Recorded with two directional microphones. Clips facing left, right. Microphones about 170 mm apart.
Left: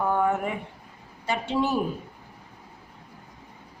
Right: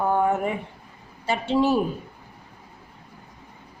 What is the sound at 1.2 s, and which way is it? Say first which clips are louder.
Speech: right 4 dB; 30° right (ahead or behind).